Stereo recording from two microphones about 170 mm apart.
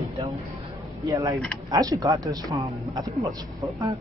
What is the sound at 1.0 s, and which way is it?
Speech, 20° right (ahead or behind).